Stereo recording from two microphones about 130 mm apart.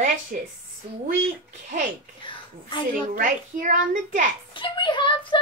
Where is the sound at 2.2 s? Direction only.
40° left (ahead or behind).